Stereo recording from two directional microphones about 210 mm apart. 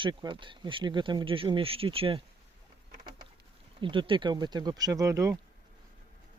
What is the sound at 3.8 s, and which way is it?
Speech, 25° right (ahead or behind).